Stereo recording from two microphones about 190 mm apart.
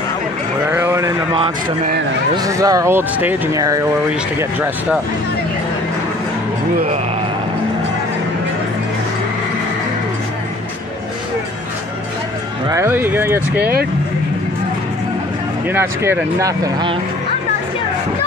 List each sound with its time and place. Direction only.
0.7 s a sound: 10° right (ahead or behind)
2.3 s speech: 20° right (ahead or behind)
12.6 s speech: 15° right (ahead or behind)
13.6 s speech: 55° right (ahead or behind)
15.7 s speech: 10° right (ahead or behind)